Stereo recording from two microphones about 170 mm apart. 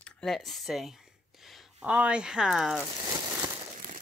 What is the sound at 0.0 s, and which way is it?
Speech, 5° left (ahead or behind).